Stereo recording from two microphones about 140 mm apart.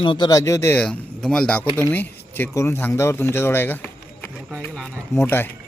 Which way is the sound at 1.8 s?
15° left (ahead or behind).